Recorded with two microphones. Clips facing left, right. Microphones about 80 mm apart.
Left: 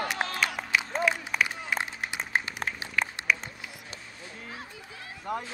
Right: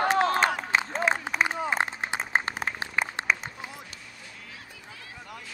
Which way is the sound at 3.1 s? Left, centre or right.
Right.